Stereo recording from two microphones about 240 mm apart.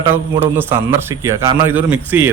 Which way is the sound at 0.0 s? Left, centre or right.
Centre.